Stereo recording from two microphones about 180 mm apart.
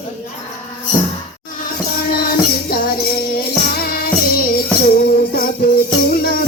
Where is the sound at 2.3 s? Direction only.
55° left (ahead or behind).